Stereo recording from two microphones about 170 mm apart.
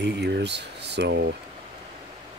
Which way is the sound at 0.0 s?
85° right.